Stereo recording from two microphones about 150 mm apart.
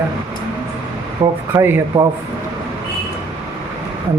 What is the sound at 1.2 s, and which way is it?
Speech, 25° right (ahead or behind).